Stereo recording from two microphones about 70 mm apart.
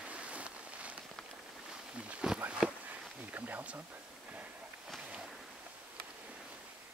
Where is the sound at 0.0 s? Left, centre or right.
Centre.